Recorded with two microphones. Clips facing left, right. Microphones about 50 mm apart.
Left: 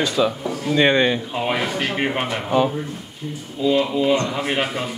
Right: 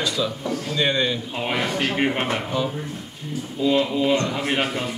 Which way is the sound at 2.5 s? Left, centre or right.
Left.